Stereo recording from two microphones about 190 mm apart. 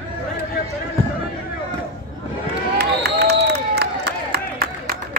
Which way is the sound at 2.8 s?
60° right (ahead or behind).